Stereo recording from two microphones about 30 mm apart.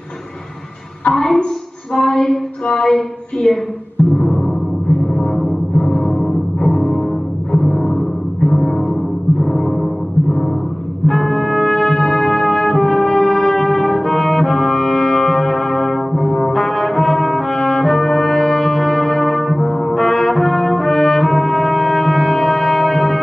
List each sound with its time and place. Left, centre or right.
1.1 s a sound: centre
2.6 s speech: centre
4.0 s music: left
5.1 s music: centre
11.1 s brass instrument: centre